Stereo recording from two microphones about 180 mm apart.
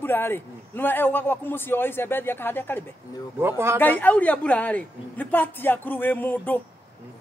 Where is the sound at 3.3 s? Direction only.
15° right (ahead or behind).